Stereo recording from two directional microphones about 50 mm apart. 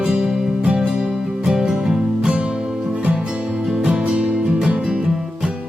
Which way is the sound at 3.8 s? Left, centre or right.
Centre.